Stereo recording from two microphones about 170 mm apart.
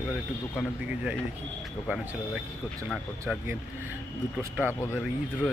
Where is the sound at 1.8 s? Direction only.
Centre (ahead or behind).